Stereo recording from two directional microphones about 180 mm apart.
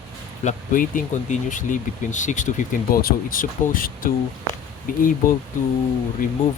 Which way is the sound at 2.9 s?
55° left (ahead or behind).